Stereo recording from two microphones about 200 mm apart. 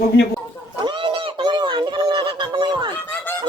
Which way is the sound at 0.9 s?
25° right (ahead or behind).